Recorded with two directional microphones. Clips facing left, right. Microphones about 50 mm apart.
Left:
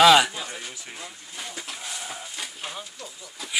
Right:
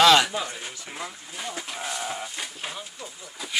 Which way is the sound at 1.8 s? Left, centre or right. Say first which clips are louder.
Right 5 dB; right.